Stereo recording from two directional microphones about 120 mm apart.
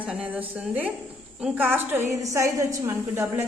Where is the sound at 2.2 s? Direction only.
25° right (ahead or behind).